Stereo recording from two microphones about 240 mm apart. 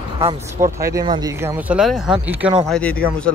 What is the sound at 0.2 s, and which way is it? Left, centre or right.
Speech, centre.